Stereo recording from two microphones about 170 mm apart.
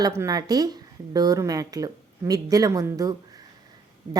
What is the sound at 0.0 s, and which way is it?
Speech, 20° right (ahead or behind).